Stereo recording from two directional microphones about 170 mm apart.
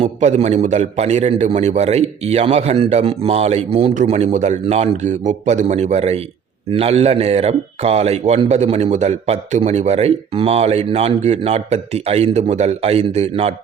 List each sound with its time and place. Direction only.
0.0 s a man's voice: 40° right (ahead or behind)